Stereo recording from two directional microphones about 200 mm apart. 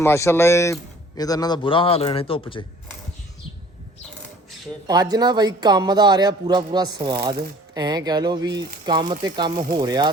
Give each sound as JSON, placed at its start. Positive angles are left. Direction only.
{"t": 0.0, "sound": "speech", "side_deg": 15}
{"t": 4.9, "sound": "speech", "side_deg": -20}